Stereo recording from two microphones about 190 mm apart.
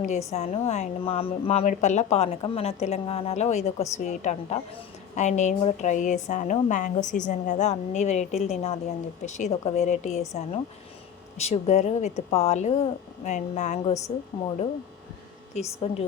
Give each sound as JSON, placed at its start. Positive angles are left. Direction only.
{"t": 0.3, "sound": "a woman's voice", "side_deg": 35}
{"t": 15.5, "sound": "a woman's voice", "side_deg": 35}